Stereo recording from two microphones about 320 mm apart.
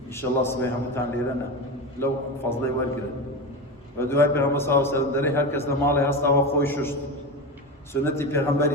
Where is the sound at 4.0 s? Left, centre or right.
Centre.